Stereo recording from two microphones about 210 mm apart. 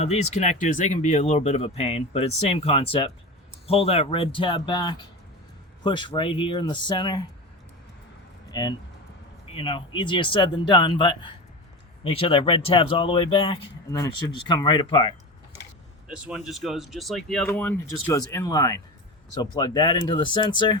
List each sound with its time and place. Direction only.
0.0 s speech: 30° left (ahead or behind)
8.4 s speech: 20° left (ahead or behind)
16.0 s speech: 5° right (ahead or behind); by 20.7 s 20° left (ahead or behind)